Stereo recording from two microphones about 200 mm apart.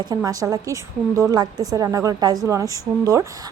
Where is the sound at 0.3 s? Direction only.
15° right (ahead or behind).